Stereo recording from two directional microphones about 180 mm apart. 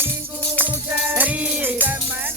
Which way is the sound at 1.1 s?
10° right (ahead or behind).